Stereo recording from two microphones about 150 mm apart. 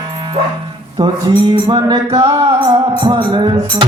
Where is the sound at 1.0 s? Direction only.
30° right (ahead or behind).